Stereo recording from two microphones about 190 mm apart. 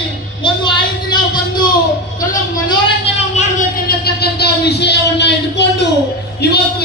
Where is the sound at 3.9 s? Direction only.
55° left (ahead or behind).